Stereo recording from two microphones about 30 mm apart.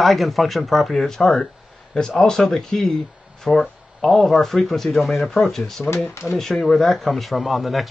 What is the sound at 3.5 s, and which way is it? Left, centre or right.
Speech, left.